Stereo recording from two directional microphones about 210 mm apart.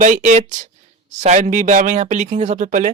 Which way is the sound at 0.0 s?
35° right (ahead or behind).